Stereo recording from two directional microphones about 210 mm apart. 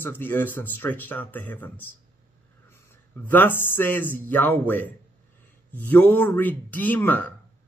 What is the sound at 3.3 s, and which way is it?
Speech, 10° left (ahead or behind).